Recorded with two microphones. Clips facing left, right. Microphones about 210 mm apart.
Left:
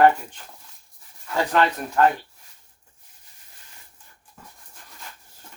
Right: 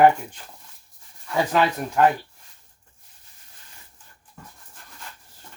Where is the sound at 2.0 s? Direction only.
10° right (ahead or behind).